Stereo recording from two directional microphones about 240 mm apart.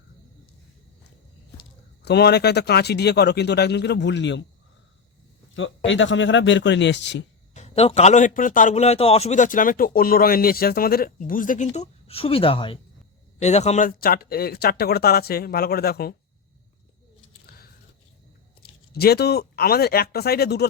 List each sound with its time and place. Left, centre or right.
2.0 s speech: left
5.5 s speech: left
7.5 s a man's voice: left
18.9 s a man's voice: left